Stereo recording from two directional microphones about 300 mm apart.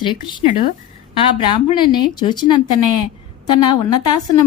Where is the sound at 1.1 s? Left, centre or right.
Centre.